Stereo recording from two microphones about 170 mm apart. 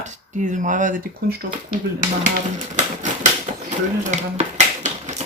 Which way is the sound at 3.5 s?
40° right (ahead or behind).